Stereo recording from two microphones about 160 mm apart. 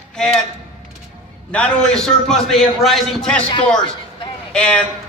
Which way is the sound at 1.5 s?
5° left (ahead or behind).